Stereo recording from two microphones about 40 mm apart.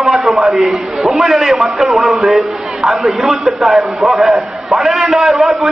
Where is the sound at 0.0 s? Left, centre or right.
Centre.